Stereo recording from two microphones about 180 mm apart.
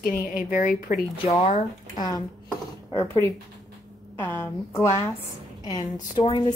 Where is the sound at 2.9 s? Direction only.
15° left (ahead or behind).